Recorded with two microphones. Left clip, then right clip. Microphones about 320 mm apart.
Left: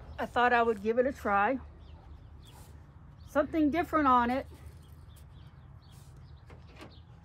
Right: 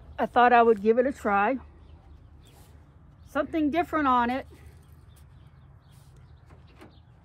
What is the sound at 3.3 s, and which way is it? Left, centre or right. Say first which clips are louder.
A woman's voice: right 1 dB; right.